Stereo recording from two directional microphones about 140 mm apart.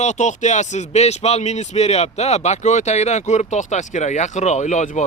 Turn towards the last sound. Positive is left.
turn(degrees=60)  # may be behind; listen again after turning